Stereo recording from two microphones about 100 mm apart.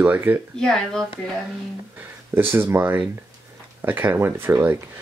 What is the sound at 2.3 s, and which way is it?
Speech, 20° right (ahead or behind).